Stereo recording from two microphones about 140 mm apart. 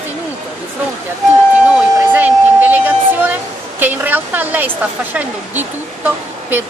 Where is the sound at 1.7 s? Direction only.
10° right (ahead or behind).